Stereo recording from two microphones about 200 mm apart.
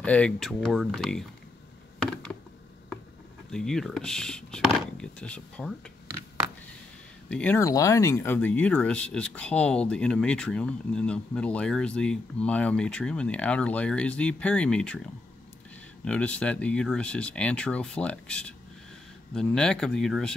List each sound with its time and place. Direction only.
0.0 s speech: 5° left (ahead or behind)
3.5 s speech: 5° left (ahead or behind)
7.2 s speech: 5° left (ahead or behind)
16.1 s speech: 5° left (ahead or behind)